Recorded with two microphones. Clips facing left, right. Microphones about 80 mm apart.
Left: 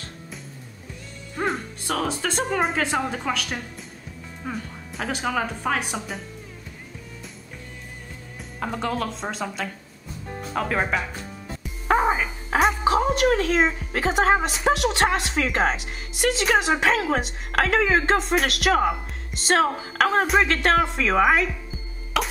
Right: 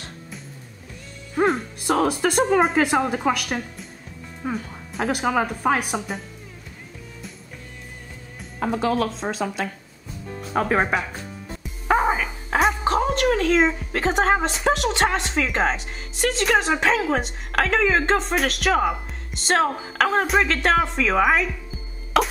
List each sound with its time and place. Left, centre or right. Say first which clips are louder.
2.1 s speech: right 6 dB; centre
4.4 s music: right 4 dB; centre
5.3 s speech: right 4 dB; centre
8.5 s a woman's voice: right 5 dB; centre
10.5 s speech: right 4 dB; centre
11.9 s a woman's voice: right 1 dB; centre
22.2 s cough: right 5 dB; right